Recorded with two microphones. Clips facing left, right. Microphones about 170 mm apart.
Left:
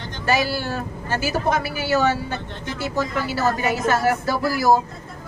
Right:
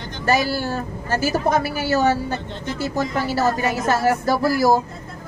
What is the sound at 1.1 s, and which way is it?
A woman's voice, 40° right (ahead or behind).